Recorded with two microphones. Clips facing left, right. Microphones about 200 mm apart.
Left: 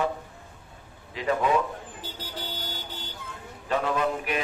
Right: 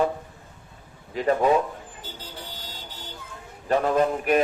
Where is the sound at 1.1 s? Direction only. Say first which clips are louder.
Right 4 dB; 45° right (ahead or behind).